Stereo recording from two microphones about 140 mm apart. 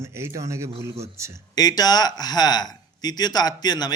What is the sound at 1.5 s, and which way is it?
Speech, 30° left (ahead or behind).